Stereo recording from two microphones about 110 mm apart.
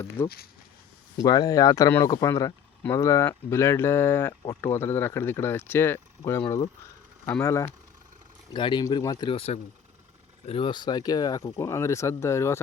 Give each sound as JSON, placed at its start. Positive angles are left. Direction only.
{"t": 0.2, "sound": "speech", "side_deg": 20}
{"t": 1.2, "sound": "speech", "side_deg": 35}
{"t": 7.4, "sound": "speech", "side_deg": 25}
{"t": 8.5, "sound": "speech", "side_deg": 45}
{"t": 8.8, "sound": "speech", "side_deg": 35}
{"t": 9.3, "sound": "speech", "side_deg": 65}
{"t": 10.6, "sound": "speech", "side_deg": 45}